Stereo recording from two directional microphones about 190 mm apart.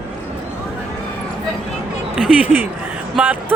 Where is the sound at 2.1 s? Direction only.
5° right (ahead or behind).